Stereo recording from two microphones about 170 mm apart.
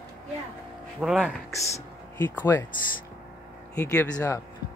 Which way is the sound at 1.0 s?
5° right (ahead or behind).